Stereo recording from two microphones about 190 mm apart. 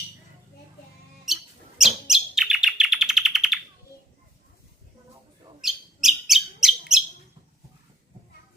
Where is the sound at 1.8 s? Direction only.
Centre (ahead or behind).